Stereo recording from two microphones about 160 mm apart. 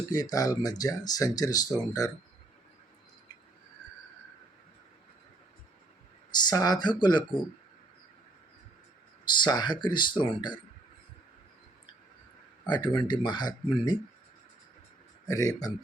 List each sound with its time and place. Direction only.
0.1 s speech: 20° left (ahead or behind)
6.3 s speech: 25° left (ahead or behind)
9.2 s speech: 30° left (ahead or behind)
12.6 s speech: 30° left (ahead or behind)
15.3 s speech: 20° left (ahead or behind)